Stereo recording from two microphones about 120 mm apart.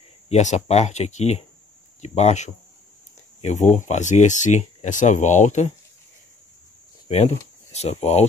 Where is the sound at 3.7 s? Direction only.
85° left.